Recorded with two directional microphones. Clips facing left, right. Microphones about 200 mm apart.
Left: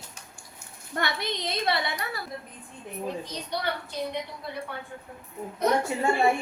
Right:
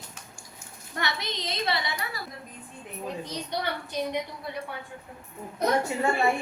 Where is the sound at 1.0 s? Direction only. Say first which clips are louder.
Left 2 dB; 55° left (ahead or behind).